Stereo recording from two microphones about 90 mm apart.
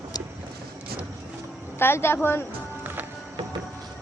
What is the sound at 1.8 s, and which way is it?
Speech, 25° left (ahead or behind).